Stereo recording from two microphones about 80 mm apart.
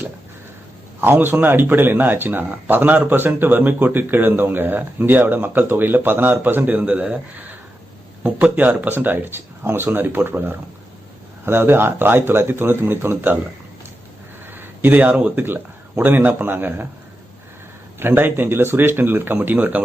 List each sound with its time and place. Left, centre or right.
1.0 s speech: right
14.4 s speech: right
18.0 s speech: right